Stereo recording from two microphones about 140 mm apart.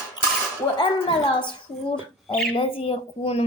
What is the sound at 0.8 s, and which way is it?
A woman's voice, 40° left (ahead or behind).